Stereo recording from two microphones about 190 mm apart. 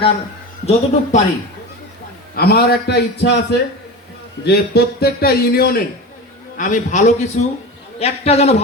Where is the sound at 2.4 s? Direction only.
55° left (ahead or behind).